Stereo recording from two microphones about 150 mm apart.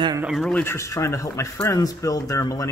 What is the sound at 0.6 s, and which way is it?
Speech, 15° left (ahead or behind).